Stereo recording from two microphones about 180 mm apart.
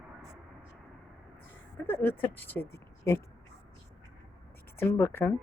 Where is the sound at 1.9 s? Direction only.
10° left (ahead or behind).